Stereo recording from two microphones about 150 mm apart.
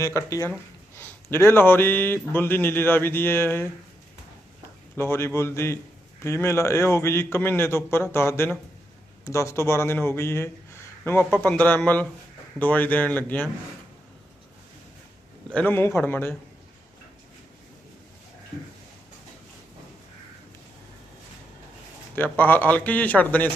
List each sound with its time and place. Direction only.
0.0 s speech: 20° left (ahead or behind)
4.9 s speech: 15° left (ahead or behind)
15.4 s speech: 10° left (ahead or behind)
22.1 s speech: 10° left (ahead or behind)